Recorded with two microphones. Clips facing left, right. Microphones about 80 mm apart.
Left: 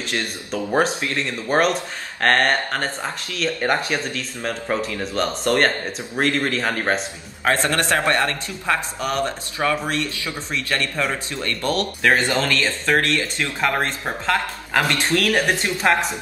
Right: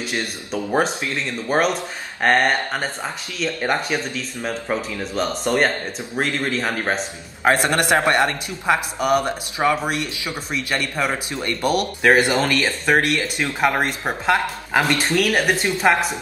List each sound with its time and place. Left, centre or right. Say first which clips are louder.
0.0 s speech: even; centre
7.4 s speech: right 2 dB; centre